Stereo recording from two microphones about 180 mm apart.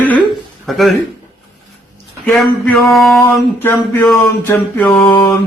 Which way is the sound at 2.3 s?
5° left (ahead or behind).